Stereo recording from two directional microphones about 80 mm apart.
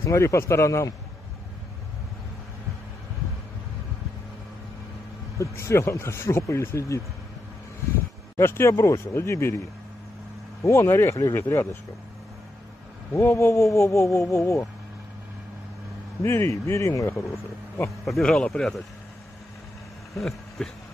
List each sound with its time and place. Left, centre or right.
0.0 s speech: left
5.4 s speech: left
8.4 s speech: left
10.6 s speech: left
13.1 s speech: left
16.2 s speech: left
18.0 s speech: centre
20.2 s a sound: centre